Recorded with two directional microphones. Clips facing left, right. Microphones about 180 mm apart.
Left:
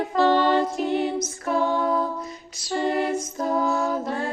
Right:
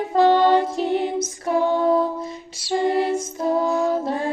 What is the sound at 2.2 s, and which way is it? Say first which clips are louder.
Music: right 4 dB; 25° right (ahead or behind).